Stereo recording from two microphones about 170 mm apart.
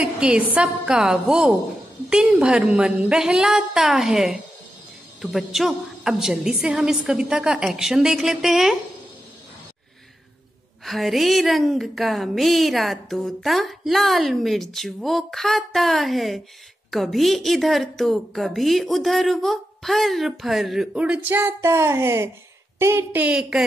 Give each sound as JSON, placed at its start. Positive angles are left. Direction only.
{"t": 0.0, "sound": "speech", "side_deg": -5}
{"t": 10.9, "sound": "speech", "side_deg": 0}
{"t": 23.2, "sound": "speech", "side_deg": -5}